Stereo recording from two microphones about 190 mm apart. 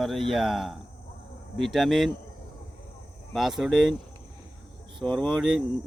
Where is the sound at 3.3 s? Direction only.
Centre (ahead or behind).